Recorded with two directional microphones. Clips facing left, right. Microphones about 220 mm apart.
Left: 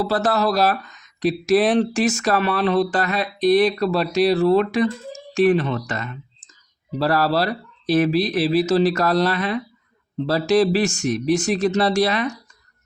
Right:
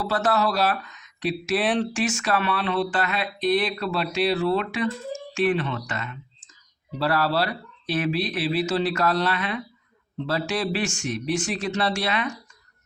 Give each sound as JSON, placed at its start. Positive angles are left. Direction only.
{"t": 0.0, "sound": "speech", "side_deg": 35}